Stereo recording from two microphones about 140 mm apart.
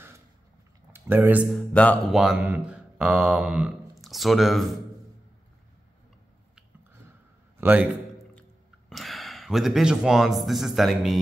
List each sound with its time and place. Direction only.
0.9 s speech: 15° right (ahead or behind)
1.5 s mantra: 10° left (ahead or behind)
2.1 s speech: 5° right (ahead or behind)
7.6 s a man's voice: 10° right (ahead or behind)
8.4 s a sound: centre (ahead or behind)